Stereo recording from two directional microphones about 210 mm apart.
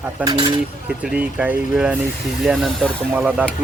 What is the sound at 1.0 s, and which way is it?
Speech, 5° right (ahead or behind).